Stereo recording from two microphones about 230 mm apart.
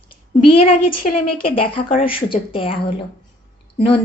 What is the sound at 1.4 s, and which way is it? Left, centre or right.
A woman's voice, left.